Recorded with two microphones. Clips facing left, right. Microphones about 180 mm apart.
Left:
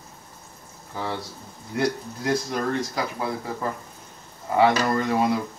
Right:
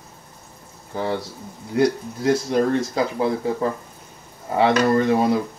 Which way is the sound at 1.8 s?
25° right (ahead or behind).